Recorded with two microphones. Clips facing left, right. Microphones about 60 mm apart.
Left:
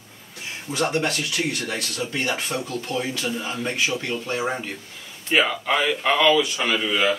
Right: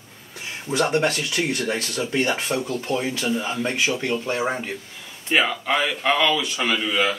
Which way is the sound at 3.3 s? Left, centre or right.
Centre.